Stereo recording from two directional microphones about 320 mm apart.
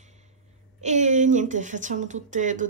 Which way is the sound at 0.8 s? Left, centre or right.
Right.